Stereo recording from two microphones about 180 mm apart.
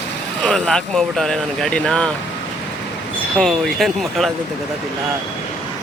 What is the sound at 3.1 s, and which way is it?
Speech, 5° left (ahead or behind).